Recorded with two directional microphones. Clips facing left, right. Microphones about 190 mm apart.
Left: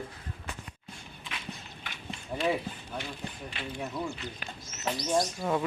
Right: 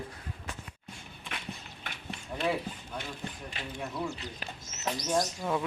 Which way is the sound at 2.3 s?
10° left (ahead or behind).